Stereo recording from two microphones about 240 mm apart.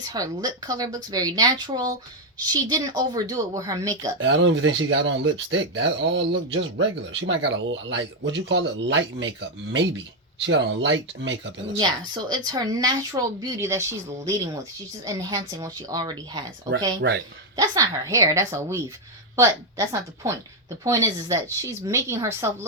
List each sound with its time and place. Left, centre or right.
0.0 s a woman's voice: centre
4.2 s speech: right
10.4 s speech: right
11.8 s a woman's voice: centre